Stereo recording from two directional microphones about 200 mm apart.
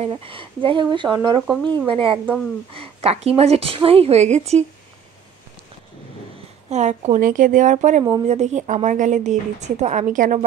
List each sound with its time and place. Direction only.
0.0 s speech: 25° right (ahead or behind)
1.5 s speech: 5° left (ahead or behind)
1.9 s speech: 25° right (ahead or behind)
6.7 s speech: 35° right (ahead or behind)